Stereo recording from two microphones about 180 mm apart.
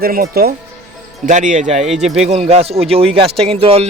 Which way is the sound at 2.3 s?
35° right (ahead or behind).